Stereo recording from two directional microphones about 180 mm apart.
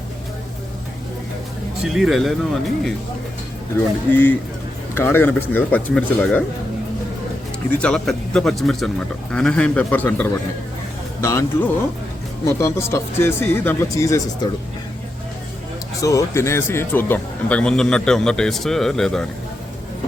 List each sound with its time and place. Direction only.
1.9 s speech: centre (ahead or behind)
3.8 s speech: 10° left (ahead or behind)
7.8 s speech: 5° left (ahead or behind)
16.0 s speech: 15° left (ahead or behind)